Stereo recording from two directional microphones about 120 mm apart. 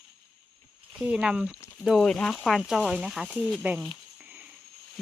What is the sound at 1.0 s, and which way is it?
Speech, 5° right (ahead or behind).